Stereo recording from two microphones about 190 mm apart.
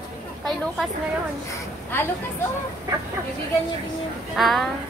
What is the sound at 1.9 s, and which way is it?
Speech, 10° left (ahead or behind).